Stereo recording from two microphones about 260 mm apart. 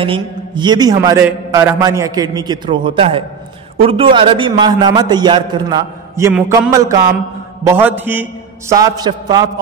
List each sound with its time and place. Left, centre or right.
0.0 s a man's voice: centre